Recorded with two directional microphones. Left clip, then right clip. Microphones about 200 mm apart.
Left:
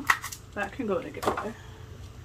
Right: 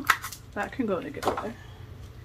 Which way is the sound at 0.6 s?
35° right (ahead or behind).